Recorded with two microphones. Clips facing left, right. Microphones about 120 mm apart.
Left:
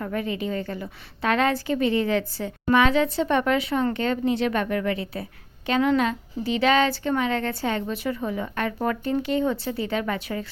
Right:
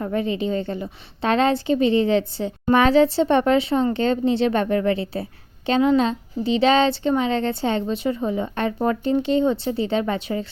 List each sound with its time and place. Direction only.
0.0 s a woman's voice: 25° right (ahead or behind)
2.7 s a woman's voice: 35° right (ahead or behind)